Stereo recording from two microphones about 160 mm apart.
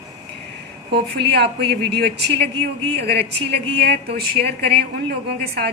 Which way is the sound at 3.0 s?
90° right.